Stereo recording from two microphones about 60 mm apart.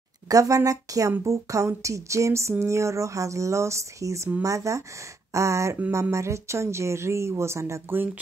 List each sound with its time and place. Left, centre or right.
0.3 s speech: right
1.2 s speech: right